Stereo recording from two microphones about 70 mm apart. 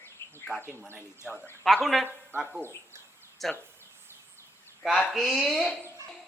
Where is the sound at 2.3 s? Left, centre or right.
Right.